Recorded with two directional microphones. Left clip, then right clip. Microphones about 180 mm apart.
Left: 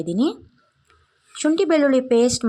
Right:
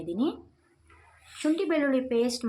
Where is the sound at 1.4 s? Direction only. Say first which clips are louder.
Left 9 dB; 40° left (ahead or behind).